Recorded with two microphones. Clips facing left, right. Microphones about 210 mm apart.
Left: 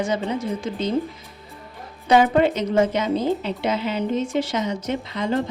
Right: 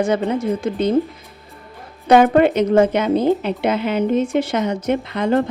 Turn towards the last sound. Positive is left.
turn(degrees=-55)  # may be behind; listen again after turning